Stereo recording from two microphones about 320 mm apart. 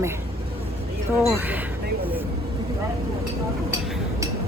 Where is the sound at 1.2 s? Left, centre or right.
Centre.